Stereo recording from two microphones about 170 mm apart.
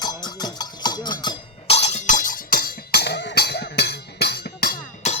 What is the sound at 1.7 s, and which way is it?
Music, 40° left (ahead or behind).